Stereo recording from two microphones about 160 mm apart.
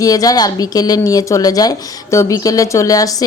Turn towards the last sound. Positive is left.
turn(degrees=20)  # may be behind; listen again after turning